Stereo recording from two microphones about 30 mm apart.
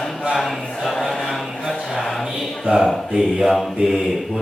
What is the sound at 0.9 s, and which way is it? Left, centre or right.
Speech, centre.